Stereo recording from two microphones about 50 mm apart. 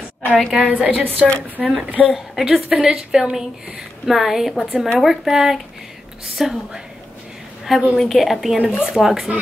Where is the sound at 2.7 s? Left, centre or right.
Centre.